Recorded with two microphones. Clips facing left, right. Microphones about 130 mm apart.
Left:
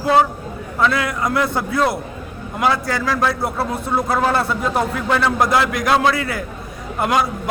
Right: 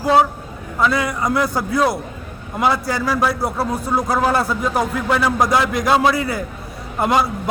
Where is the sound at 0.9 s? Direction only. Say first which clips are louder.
Even; 20° right (ahead or behind).